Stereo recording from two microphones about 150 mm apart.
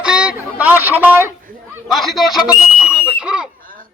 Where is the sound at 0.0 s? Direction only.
5° right (ahead or behind).